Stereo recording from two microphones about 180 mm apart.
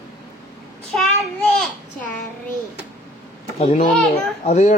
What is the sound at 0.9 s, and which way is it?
Child singing, 5° left (ahead or behind).